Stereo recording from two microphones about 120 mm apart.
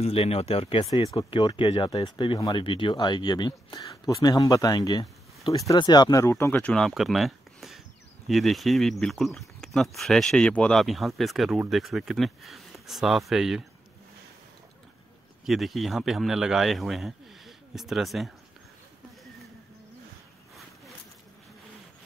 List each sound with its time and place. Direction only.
0.0 s speech: 55° left (ahead or behind)
0.9 s speech: 45° left (ahead or behind)
6.2 s speech: 20° left (ahead or behind)
6.9 s a sound: centre (ahead or behind)
8.3 s speech: centre (ahead or behind)
15.4 s speech: centre (ahead or behind)